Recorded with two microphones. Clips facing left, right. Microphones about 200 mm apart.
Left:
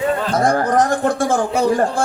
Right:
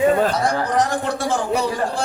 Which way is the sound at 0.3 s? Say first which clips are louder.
Left 4 dB; 50° left (ahead or behind).